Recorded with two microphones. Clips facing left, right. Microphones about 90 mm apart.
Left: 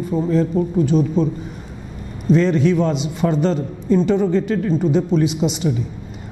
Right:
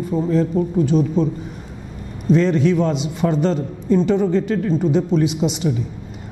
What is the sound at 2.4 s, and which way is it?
A man's voice, 15° left (ahead or behind).